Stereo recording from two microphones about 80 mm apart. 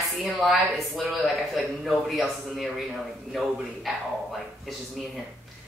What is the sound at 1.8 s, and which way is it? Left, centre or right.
Speech, centre.